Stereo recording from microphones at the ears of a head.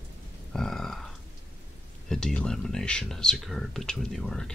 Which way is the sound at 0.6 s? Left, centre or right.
Centre.